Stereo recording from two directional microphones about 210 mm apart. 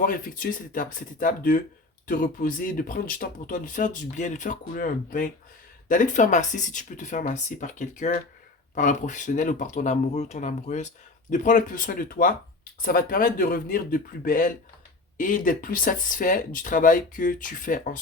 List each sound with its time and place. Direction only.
0.0 s speech: 40° left (ahead or behind)